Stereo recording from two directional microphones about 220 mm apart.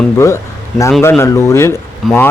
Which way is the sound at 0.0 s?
15° left (ahead or behind).